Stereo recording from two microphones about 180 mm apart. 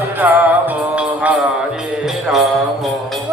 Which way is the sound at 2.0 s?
Centre (ahead or behind).